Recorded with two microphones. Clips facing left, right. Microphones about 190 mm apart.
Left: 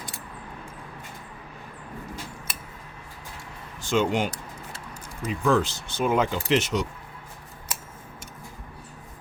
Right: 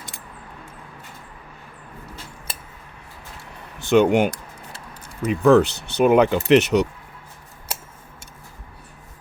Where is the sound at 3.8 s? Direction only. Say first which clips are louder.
Right 8 dB; 65° right (ahead or behind).